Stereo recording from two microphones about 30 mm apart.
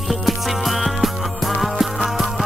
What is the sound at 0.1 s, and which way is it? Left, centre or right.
Music, centre.